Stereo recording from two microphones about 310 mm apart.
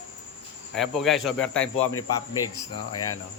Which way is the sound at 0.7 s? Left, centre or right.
Centre.